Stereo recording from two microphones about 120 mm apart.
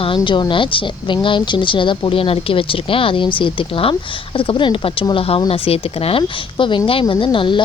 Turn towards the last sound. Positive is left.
turn(degrees=40)  # may be behind; listen again after turning